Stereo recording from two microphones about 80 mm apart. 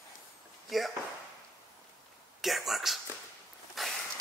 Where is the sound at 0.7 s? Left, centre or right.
Centre.